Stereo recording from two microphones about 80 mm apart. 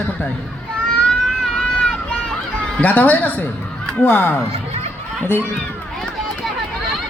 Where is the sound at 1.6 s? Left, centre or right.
Centre.